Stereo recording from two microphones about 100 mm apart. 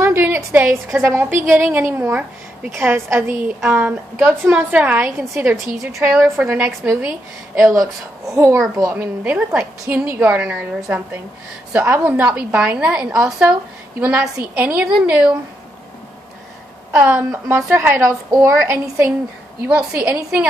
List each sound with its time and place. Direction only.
0.0 s a sound: 25° right (ahead or behind)
0.9 s a woman's voice: 25° right (ahead or behind)
3.4 s a woman's voice: 15° right (ahead or behind)
7.0 s a woman's voice: 5° right (ahead or behind)
7.6 s a woman's voice: 30° right (ahead or behind)
8.9 s a woman's voice: 20° right (ahead or behind)
17.0 s a woman's voice: 20° right (ahead or behind)
19.9 s a woman's voice: 10° right (ahead or behind)